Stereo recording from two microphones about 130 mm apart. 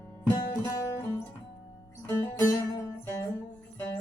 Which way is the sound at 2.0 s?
25° left (ahead or behind).